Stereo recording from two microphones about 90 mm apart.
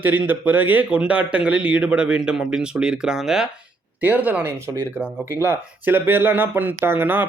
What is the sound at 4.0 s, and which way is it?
Speech, 20° right (ahead or behind).